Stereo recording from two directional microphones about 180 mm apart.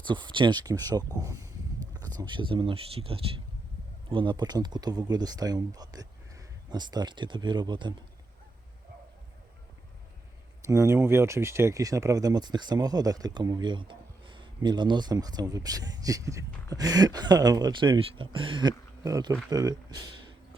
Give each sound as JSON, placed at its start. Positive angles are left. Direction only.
{"t": 0.0, "sound": "speech", "side_deg": -25}
{"t": 10.7, "sound": "speech", "side_deg": -15}